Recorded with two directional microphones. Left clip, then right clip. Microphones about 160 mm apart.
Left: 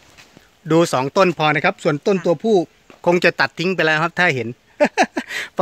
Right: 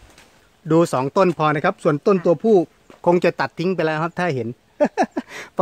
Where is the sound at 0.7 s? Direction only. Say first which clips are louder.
Left 1 dB; 5° right (ahead or behind).